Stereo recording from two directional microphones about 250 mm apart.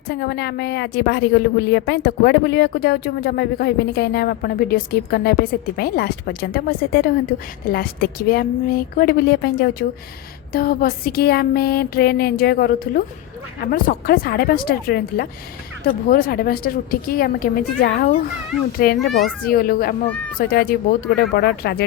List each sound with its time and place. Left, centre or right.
0.1 s a woman's voice: left
20.1 s speech: centre
20.4 s a woman's voice: left